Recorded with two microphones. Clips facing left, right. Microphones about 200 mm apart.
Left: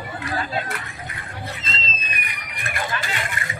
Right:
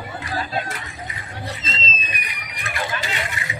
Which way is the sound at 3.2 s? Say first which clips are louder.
Right 1 dB; 50° left (ahead or behind).